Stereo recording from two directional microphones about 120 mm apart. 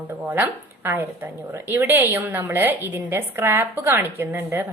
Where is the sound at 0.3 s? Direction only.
15° right (ahead or behind).